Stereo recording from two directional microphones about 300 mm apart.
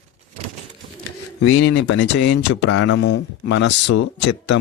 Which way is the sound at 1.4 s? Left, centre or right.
Left.